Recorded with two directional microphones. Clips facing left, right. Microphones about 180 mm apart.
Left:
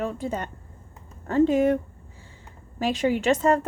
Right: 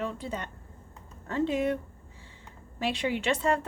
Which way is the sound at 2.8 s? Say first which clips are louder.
Left 6 dB; 45° left (ahead or behind).